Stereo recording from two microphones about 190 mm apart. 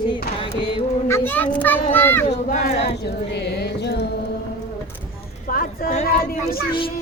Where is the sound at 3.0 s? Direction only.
60° left (ahead or behind).